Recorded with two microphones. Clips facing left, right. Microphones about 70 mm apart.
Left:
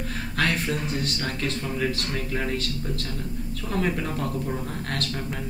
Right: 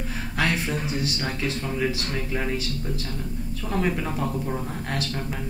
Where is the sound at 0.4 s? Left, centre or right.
Centre.